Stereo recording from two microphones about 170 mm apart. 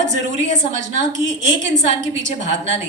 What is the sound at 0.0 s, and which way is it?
A woman's voice, 45° right (ahead or behind).